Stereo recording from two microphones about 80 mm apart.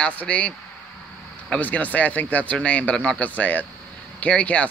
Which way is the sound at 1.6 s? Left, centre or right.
Centre.